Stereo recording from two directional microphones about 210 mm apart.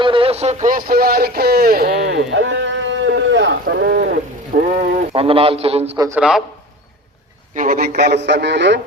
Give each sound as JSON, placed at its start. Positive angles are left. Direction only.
{"t": 0.0, "sound": "speech", "side_deg": -25}
{"t": 5.1, "sound": "a man's voice", "side_deg": -25}
{"t": 6.1, "sound": "a man's voice", "side_deg": -5}
{"t": 7.5, "sound": "a man's voice", "side_deg": -40}